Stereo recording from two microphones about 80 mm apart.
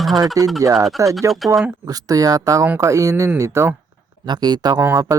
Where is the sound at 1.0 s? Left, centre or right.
Right.